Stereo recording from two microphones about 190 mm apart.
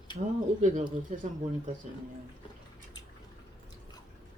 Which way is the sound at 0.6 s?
45° right (ahead or behind).